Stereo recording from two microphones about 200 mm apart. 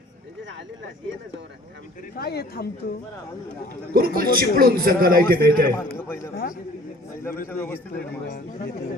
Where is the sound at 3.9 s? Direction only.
50° right (ahead or behind).